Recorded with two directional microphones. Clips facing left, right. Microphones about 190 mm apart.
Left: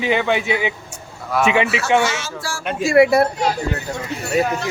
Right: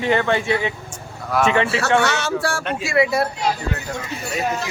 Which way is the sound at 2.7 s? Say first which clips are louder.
Left 7 dB; 50° left (ahead or behind).